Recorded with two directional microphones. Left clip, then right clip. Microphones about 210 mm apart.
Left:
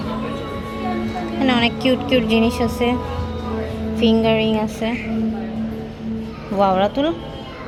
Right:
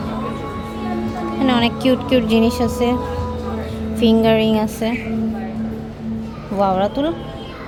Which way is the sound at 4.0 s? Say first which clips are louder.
Right 2 dB; 15° right (ahead or behind).